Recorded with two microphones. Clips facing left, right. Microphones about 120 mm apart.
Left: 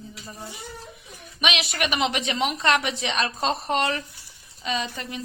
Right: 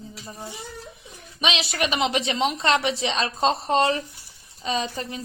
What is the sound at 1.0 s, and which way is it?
A woman's voice, 30° right (ahead or behind).